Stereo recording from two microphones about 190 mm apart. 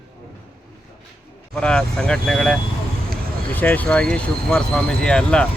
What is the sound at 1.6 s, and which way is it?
Speech, 5° left (ahead or behind).